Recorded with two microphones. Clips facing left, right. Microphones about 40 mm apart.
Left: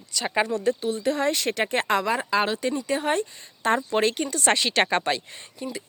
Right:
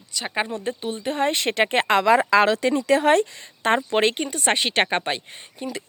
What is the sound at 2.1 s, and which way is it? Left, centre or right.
Speech, right.